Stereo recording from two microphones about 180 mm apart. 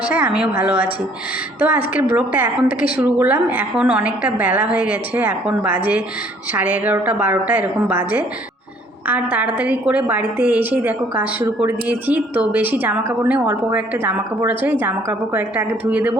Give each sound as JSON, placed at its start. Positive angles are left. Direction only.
{"t": 0.0, "sound": "a woman's voice", "side_deg": -5}